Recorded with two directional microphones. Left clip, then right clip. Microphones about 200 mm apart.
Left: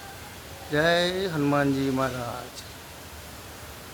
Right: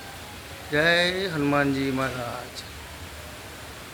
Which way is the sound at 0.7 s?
25° left (ahead or behind).